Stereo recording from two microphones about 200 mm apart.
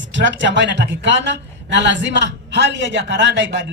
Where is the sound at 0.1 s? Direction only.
65° right (ahead or behind).